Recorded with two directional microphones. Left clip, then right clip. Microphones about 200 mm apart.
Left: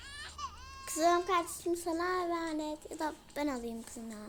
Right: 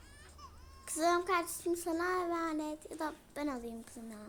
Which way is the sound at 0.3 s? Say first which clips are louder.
Left 11 dB; 45° left (ahead or behind).